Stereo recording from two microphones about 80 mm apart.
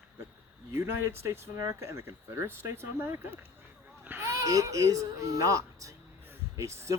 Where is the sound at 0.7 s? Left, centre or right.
Right.